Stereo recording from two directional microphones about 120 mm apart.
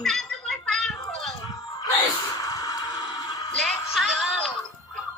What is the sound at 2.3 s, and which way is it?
Music, 30° left (ahead or behind).